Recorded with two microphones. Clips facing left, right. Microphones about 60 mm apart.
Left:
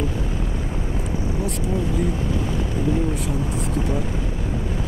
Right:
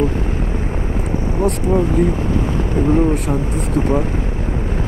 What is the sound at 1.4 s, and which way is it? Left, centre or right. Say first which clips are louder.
Speech: right 11 dB; right.